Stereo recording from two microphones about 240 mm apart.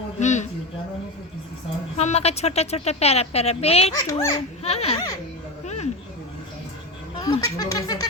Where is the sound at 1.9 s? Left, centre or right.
Left.